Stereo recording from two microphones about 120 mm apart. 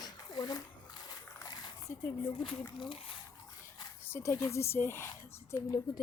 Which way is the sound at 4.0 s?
20° left (ahead or behind).